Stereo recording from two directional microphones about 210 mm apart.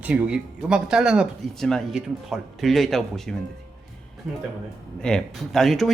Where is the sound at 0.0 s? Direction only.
5° right (ahead or behind).